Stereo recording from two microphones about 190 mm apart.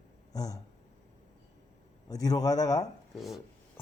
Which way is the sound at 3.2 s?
Centre (ahead or behind).